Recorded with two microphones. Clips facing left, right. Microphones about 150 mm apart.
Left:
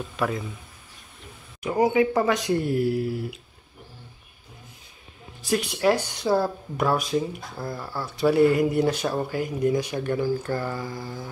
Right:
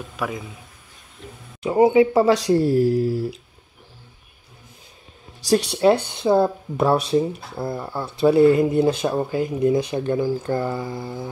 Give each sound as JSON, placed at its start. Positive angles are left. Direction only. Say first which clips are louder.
{"t": 0.2, "sound": "speech", "louder": "left 1 dB", "side_deg": -10}
{"t": 1.6, "sound": "speech", "louder": "right 6 dB", "side_deg": -25}
{"t": 5.5, "sound": "speech", "louder": "right 5 dB", "side_deg": -30}